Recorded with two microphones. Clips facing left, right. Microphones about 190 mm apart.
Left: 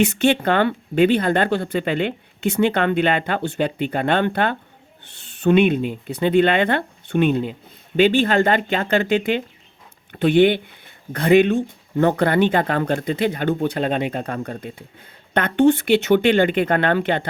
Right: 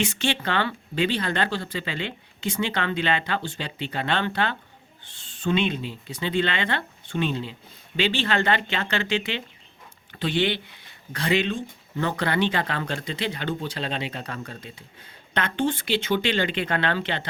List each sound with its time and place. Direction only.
0.0 s speech: 60° left (ahead or behind)
5.2 s speech: 65° left (ahead or behind)